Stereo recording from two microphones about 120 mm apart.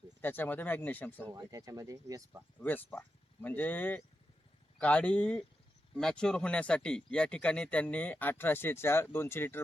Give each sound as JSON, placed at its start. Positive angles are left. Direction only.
{"t": 0.2, "sound": "speech", "side_deg": 15}
{"t": 1.3, "sound": "speech", "side_deg": -30}
{"t": 2.6, "sound": "speech", "side_deg": 15}